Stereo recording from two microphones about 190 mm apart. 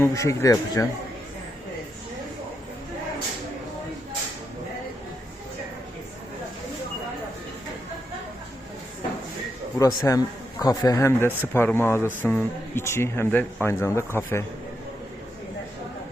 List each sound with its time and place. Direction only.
0.0 s a man's voice: 15° left (ahead or behind)
9.7 s a man's voice: 15° left (ahead or behind)